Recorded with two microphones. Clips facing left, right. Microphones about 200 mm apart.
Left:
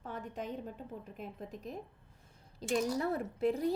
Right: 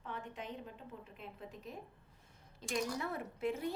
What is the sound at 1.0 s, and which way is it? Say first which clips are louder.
A woman's voice: left 5 dB; 45° left (ahead or behind).